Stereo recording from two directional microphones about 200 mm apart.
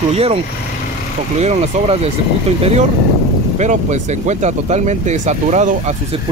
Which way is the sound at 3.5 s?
35° right (ahead or behind).